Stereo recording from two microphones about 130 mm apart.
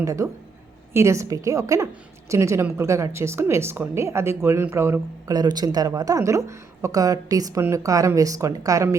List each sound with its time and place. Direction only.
0.0 s speech: 25° right (ahead or behind)
5.4 s speech: 30° right (ahead or behind)